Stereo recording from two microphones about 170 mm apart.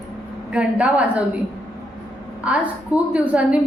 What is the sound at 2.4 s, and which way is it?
A woman's voice, 5° right (ahead or behind).